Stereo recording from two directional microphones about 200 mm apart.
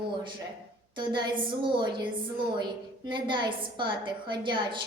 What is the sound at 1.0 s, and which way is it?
A woman's voice, 25° right (ahead or behind).